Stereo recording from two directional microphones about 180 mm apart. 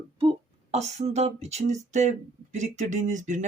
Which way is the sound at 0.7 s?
40° right (ahead or behind).